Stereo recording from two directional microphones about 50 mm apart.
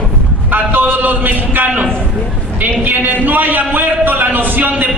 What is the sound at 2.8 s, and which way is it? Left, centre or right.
A man's voice, right.